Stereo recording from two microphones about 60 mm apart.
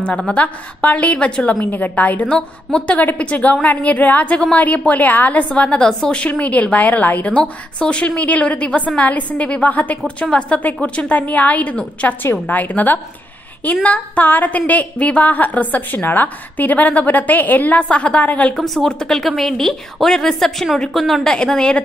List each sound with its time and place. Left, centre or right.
0.0 s a woman's voice: centre
1.7 s a woman's voice: left
18.6 s a woman's voice: centre